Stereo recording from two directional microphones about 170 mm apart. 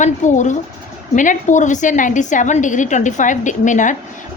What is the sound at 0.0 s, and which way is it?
A woman's voice, 45° left (ahead or behind).